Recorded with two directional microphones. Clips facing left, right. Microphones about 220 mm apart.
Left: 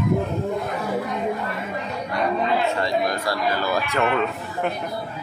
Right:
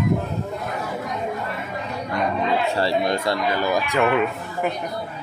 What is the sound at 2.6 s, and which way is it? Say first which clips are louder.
Speech: right 1 dB; 35° right (ahead or behind).